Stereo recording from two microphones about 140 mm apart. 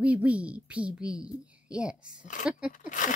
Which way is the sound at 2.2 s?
70° left (ahead or behind).